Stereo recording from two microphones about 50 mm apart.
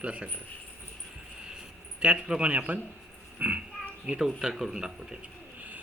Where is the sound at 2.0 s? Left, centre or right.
Centre.